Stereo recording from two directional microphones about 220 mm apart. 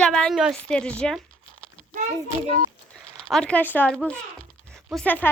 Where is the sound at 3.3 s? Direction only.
5° left (ahead or behind).